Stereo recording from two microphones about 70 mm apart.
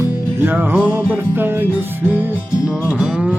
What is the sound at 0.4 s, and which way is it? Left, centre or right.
Music, right.